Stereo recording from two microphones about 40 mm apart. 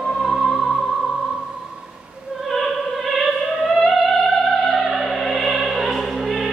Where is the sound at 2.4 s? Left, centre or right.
Centre.